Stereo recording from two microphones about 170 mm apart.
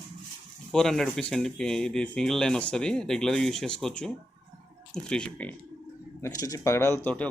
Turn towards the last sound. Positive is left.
turn(degrees=10)  # may be behind; listen again after turning